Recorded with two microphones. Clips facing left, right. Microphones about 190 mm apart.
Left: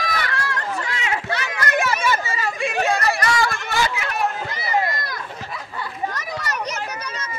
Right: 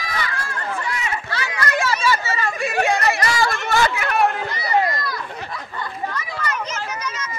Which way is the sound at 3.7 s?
55° right (ahead or behind).